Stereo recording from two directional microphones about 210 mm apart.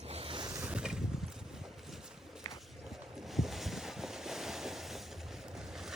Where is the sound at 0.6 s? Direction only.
5° right (ahead or behind).